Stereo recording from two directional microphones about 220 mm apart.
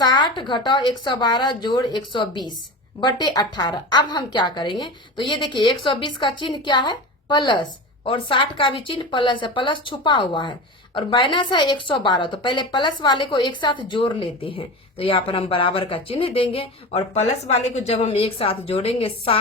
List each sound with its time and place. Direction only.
0.0 s speech: 20° left (ahead or behind)